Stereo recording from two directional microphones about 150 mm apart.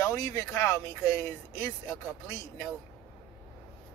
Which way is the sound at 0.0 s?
15° left (ahead or behind).